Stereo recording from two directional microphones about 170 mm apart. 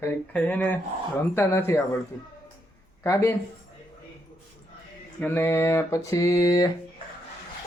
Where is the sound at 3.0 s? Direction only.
15° left (ahead or behind).